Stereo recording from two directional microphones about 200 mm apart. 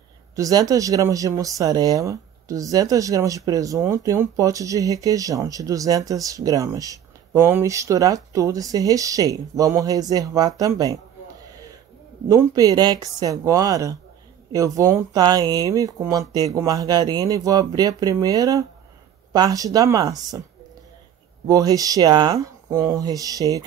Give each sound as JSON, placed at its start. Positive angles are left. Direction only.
{"t": 0.4, "sound": "speech", "side_deg": -15}
{"t": 12.3, "sound": "speech", "side_deg": -15}
{"t": 21.5, "sound": "speech", "side_deg": -15}